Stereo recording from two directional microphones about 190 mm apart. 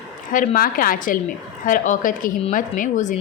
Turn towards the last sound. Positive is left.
turn(degrees=40)  # may be behind; listen again after turning